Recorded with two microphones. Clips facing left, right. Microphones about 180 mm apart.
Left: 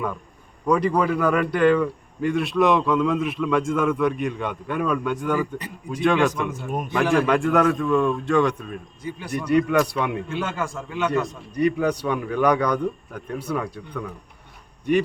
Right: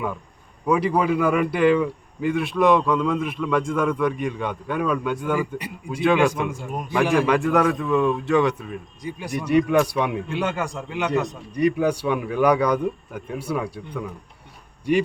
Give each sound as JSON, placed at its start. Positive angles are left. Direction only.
{"t": 0.7, "sound": "a man's voice", "side_deg": -5}